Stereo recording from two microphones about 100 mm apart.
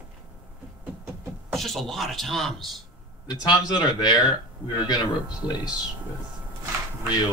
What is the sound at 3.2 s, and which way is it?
Speech, 45° left (ahead or behind).